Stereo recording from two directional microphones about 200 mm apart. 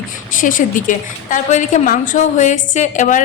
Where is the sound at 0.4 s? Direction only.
40° left (ahead or behind).